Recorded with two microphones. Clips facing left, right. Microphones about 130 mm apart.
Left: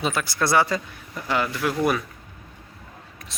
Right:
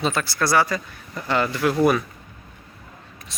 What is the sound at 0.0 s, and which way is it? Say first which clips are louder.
Speech: right 2 dB; 10° left (ahead or behind).